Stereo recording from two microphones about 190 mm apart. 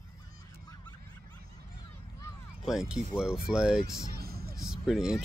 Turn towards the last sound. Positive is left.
turn(degrees=-5)  # may be behind; listen again after turning